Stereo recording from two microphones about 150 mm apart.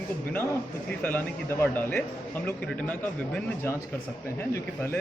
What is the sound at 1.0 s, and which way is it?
Speech, 15° left (ahead or behind).